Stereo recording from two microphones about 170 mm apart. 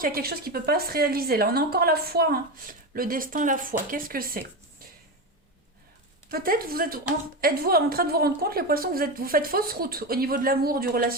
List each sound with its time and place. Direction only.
0.0 s a woman's voice: 60° right (ahead or behind)
6.3 s a woman's voice: 60° right (ahead or behind)